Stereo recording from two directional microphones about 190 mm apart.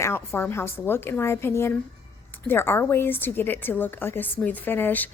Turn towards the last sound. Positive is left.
turn(degrees=10)  # may be behind; listen again after turning